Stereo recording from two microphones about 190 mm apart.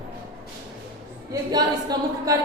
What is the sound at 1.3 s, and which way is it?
A woman's voice, 20° right (ahead or behind).